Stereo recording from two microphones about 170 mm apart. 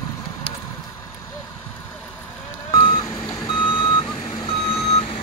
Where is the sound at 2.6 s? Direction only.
30° left (ahead or behind).